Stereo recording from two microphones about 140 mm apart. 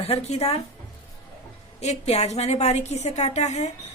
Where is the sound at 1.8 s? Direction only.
50° left (ahead or behind).